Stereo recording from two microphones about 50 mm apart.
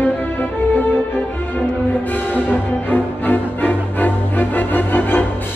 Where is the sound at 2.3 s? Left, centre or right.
Left.